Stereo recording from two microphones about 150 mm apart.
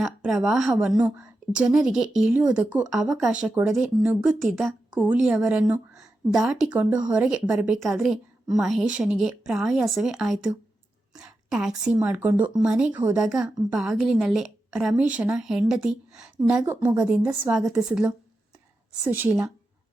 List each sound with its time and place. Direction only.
0.0 s a woman's voice: centre (ahead or behind)
16.6 s a woman's voice: 15° right (ahead or behind)